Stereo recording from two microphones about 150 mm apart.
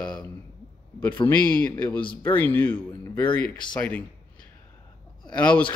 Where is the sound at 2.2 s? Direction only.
15° left (ahead or behind).